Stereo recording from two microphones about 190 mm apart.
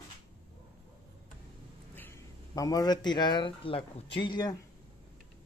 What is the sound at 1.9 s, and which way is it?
Speech, 15° left (ahead or behind).